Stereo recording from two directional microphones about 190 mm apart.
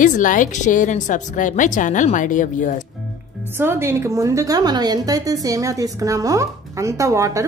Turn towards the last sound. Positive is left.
turn(degrees=-15)  # may be behind; listen again after turning